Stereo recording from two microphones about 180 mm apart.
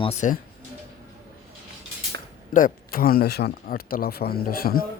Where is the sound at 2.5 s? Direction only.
50° left (ahead or behind).